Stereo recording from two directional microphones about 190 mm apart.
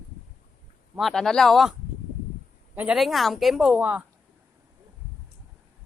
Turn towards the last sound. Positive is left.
turn(degrees=-5)  # may be behind; listen again after turning